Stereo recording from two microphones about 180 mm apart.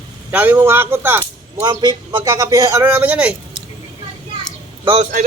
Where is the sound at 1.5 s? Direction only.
25° right (ahead or behind); by 3.6 s 5° right (ahead or behind).